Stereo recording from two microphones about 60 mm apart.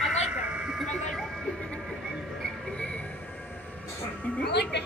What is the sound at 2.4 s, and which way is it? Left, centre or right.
Music, centre.